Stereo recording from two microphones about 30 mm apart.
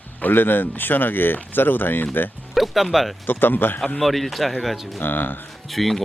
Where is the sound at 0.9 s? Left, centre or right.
Left.